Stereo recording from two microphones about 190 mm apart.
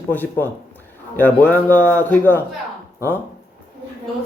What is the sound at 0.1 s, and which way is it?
Speech, 10° left (ahead or behind).